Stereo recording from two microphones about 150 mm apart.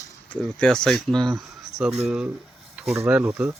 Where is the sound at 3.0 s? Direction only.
10° right (ahead or behind).